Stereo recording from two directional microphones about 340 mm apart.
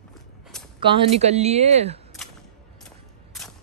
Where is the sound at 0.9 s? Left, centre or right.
Centre.